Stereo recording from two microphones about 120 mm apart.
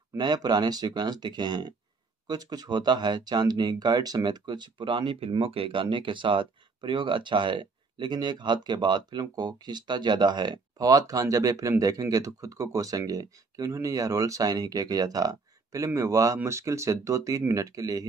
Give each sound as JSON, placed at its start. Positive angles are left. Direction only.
{"t": 0.2, "sound": "speech", "side_deg": -35}